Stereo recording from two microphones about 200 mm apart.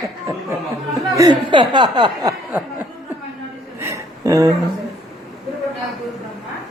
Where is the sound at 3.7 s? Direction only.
15° right (ahead or behind).